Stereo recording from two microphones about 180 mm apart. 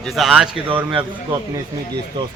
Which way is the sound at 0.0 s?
Centre (ahead or behind).